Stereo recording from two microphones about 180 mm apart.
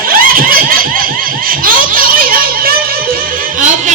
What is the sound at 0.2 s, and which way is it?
Giggle, 50° right (ahead or behind).